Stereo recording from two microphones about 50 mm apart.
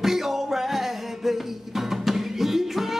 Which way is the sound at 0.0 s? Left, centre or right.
Centre.